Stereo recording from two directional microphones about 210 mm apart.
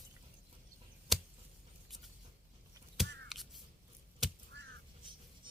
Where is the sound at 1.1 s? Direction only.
Centre (ahead or behind).